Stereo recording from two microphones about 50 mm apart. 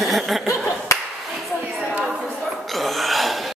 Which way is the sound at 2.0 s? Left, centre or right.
Centre.